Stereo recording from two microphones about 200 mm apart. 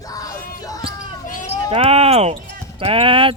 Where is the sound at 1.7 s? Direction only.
30° right (ahead or behind).